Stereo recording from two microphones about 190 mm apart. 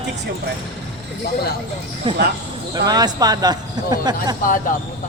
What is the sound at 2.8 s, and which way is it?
Speech, 20° right (ahead or behind).